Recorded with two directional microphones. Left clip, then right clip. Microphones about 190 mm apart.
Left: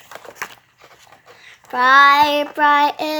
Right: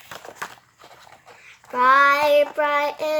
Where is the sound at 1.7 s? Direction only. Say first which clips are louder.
Left 4 dB; 50° left (ahead or behind).